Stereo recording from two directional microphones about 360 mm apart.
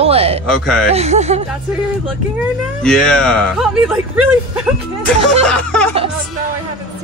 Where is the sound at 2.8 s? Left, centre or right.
Centre.